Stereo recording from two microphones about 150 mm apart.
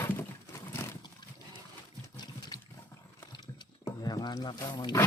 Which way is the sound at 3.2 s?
30° left (ahead or behind).